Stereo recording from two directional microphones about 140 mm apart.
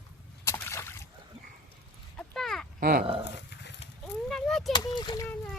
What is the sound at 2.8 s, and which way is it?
Speech, 90° right.